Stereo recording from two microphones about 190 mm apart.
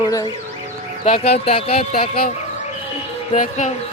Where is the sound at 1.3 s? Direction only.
30° left (ahead or behind).